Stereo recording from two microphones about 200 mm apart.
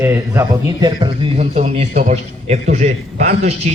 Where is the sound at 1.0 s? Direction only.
30° right (ahead or behind).